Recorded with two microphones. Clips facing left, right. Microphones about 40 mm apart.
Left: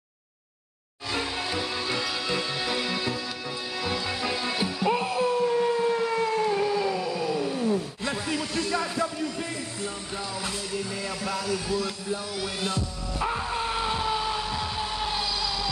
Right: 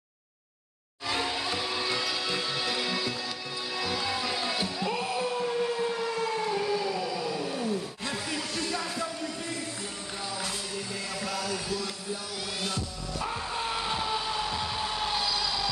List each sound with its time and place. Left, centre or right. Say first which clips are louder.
1.1 s music: left 1 dB; centre
4.1 s music: left 2 dB; centre
4.8 s music: left 8 dB; left
5.1 s howl: left 5 dB; centre
7.1 s a sound: left 4 dB; centre
11.2 s a sound: left 3 dB; centre
11.7 s music: left 5 dB; centre
13.6 s vehicle: left 3 dB; centre